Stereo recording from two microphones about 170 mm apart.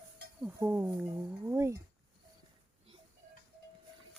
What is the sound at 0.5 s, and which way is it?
Speech, 10° right (ahead or behind).